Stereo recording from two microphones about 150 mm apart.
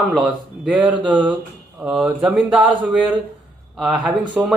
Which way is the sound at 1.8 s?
5° right (ahead or behind).